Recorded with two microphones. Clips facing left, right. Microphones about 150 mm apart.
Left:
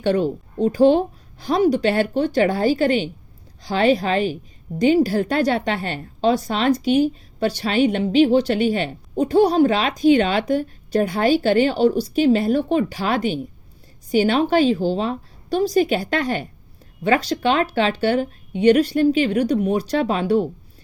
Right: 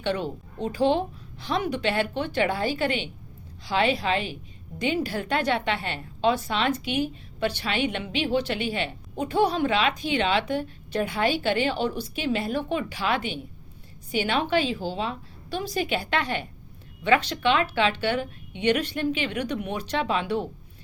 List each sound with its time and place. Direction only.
0.0 s a woman's voice: 40° left (ahead or behind)